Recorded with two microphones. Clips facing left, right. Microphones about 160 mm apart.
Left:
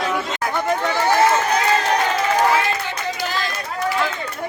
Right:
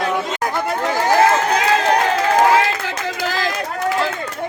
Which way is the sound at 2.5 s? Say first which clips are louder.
Right 3 dB; 90° right.